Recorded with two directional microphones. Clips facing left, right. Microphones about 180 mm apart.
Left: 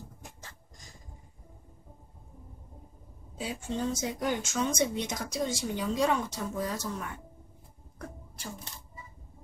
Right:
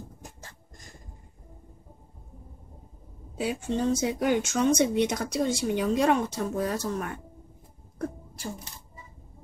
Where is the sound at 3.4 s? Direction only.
65° right (ahead or behind).